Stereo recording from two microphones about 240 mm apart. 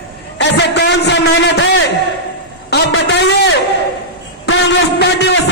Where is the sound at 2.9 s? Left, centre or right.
Left.